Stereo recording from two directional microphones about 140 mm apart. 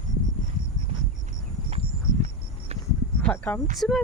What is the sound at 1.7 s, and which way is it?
Horse, 45° right (ahead or behind).